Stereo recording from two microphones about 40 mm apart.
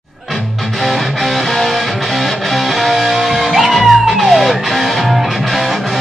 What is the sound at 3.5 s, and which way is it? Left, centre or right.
Music, centre.